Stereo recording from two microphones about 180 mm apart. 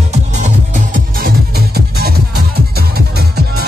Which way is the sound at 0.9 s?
55° right (ahead or behind).